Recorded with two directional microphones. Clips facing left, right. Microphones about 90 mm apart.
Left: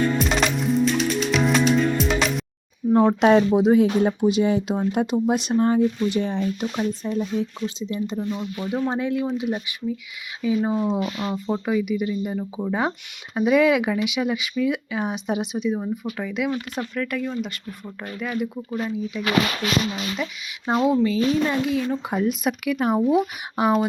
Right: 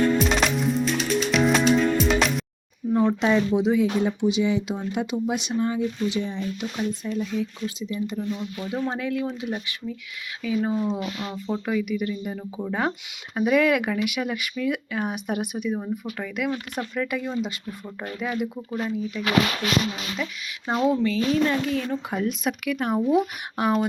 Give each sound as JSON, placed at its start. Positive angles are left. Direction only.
{"t": 0.2, "sound": "music", "side_deg": 0}
{"t": 2.9, "sound": "speech", "side_deg": 60}
{"t": 6.6, "sound": "speech", "side_deg": 35}
{"t": 11.6, "sound": "speech", "side_deg": 15}
{"t": 16.7, "sound": "speech", "side_deg": -10}
{"t": 20.7, "sound": "speech", "side_deg": 15}